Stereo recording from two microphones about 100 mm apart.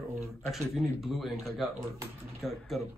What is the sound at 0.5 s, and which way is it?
Speech, centre (ahead or behind).